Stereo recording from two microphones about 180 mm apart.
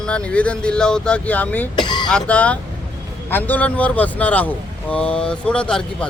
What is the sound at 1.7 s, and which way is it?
Speech, 25° left (ahead or behind).